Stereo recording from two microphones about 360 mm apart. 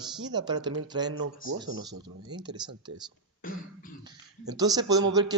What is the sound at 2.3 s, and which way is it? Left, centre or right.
Speech, centre.